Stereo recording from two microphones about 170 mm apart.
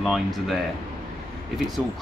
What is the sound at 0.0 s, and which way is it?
Speech, centre (ahead or behind).